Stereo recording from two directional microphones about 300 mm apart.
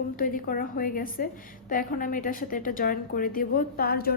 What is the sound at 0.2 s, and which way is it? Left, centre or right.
A woman's voice, left.